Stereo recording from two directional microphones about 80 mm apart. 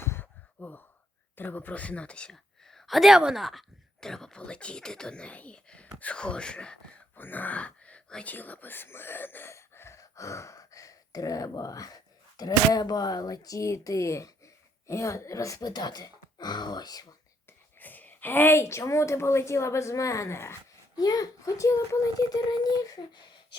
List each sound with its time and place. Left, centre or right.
0.0 s gasp: left
1.4 s speech: left
2.3 s speech: centre; by 17.2 s left
17.7 s a woman's voice: left
20.9 s speech: left